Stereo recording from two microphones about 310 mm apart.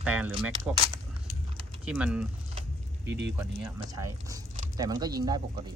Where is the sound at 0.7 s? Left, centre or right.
Centre.